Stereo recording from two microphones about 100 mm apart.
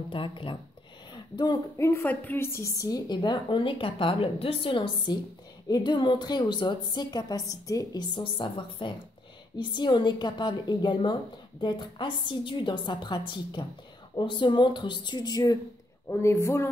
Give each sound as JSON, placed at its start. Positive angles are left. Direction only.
{"t": 0.1, "sound": "a woman's voice", "side_deg": 60}
{"t": 1.1, "sound": "a sound", "side_deg": 45}
{"t": 1.8, "sound": "a woman's voice", "side_deg": 25}
{"t": 3.1, "sound": "a woman's voice", "side_deg": 50}
{"t": 8.1, "sound": "a woman's voice", "side_deg": 60}
{"t": 16.1, "sound": "a woman's voice", "side_deg": 30}